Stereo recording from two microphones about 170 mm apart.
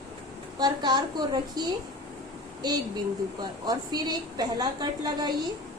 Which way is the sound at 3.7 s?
25° right (ahead or behind).